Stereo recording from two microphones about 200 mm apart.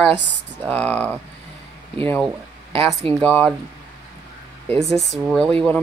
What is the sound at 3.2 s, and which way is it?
Speech, 5° left (ahead or behind).